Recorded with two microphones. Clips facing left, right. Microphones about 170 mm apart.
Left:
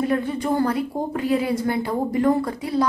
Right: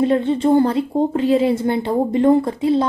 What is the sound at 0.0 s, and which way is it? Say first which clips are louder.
A woman's voice: right 6 dB; 25° right (ahead or behind).